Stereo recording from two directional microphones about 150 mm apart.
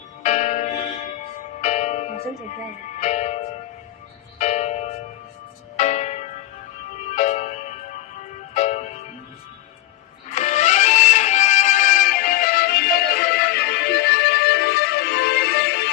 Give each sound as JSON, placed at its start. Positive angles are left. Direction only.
{"t": 0.2, "sound": "music", "side_deg": 50}
{"t": 5.7, "sound": "church bell", "side_deg": 50}
{"t": 7.2, "sound": "music", "side_deg": 50}
{"t": 10.3, "sound": "music", "side_deg": 50}